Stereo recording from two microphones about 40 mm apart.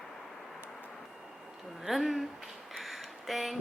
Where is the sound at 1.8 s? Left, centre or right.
Centre.